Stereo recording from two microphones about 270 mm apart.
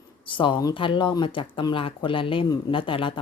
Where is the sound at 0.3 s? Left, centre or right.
Centre.